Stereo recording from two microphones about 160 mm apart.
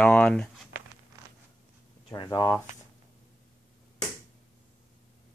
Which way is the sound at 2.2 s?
25° left (ahead or behind).